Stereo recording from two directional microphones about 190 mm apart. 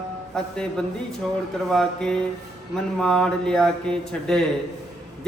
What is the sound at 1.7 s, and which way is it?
Speech, 5° left (ahead or behind).